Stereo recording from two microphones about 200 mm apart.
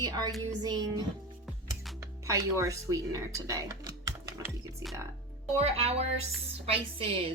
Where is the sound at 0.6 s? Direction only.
20° right (ahead or behind).